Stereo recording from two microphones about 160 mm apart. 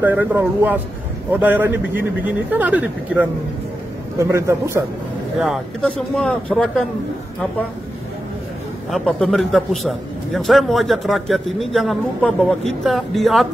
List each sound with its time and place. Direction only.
0.0 s a man's voice: 10° right (ahead or behind)
5.8 s a man's voice: 5° left (ahead or behind)
8.9 s a man's voice: centre (ahead or behind)